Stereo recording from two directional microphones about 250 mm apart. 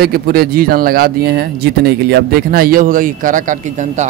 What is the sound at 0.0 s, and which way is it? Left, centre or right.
A man's voice, right.